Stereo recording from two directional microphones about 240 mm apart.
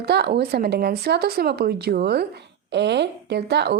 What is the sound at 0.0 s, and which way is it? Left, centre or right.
A woman's voice, right.